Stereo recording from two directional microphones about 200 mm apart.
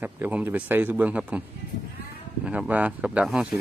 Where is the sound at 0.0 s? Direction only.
10° right (ahead or behind).